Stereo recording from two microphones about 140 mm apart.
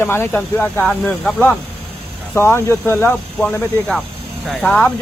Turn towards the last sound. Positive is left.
turn(degrees=10)  # may be behind; listen again after turning